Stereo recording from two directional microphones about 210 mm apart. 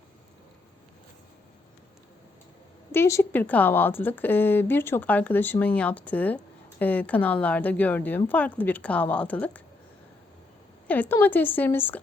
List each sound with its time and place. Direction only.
2.9 s a woman's voice: 10° left (ahead or behind)
10.8 s a woman's voice: 10° left (ahead or behind)